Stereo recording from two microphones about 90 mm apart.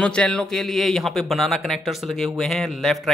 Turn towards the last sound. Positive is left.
turn(degrees=0)  # may be behind; listen again after turning